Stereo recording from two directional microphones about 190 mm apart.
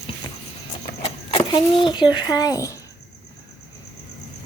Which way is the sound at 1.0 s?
25° left (ahead or behind).